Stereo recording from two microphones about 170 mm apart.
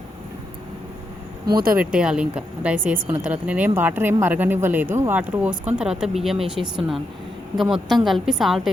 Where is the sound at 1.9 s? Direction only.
5° right (ahead or behind).